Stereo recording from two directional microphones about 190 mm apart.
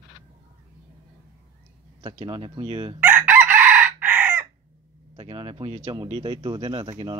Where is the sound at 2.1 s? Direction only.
25° right (ahead or behind).